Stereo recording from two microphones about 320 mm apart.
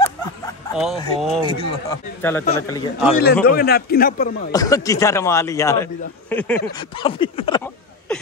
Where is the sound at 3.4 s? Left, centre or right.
Left.